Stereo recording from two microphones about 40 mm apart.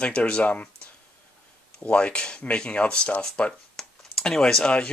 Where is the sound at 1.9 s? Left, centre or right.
Left.